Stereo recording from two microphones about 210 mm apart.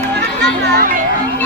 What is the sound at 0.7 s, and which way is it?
Music, 40° right (ahead or behind).